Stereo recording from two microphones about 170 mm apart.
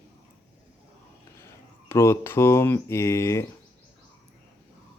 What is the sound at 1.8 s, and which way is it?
Speech, 15° left (ahead or behind).